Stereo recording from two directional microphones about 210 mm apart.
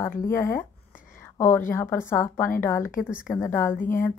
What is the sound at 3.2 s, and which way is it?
Speech, 15° left (ahead or behind).